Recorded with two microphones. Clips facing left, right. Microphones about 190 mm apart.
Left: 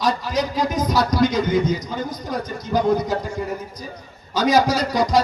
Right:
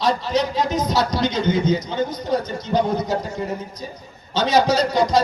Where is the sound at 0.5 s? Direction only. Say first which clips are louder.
Even; 25° right (ahead or behind).